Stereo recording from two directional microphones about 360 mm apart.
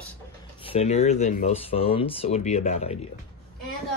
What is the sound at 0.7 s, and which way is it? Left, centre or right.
Speech, centre.